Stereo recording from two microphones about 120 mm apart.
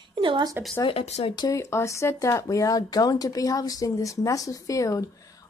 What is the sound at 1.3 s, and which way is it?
A woman's voice, 30° left (ahead or behind).